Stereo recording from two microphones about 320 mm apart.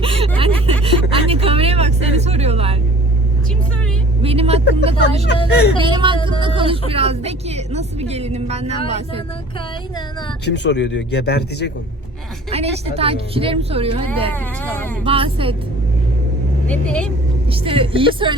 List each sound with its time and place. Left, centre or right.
0.0 s a sound: centre
1.1 s vehicle: centre
4.2 s vehicle: centre
4.9 s speech: centre
5.3 s speech: left
5.8 s a woman's voice: centre
10.4 s speech: left
12.5 s a woman's voice: centre
14.3 s speech: centre
15.0 s a woman's voice: centre
16.6 s speech: centre
17.5 s a woman's voice: centre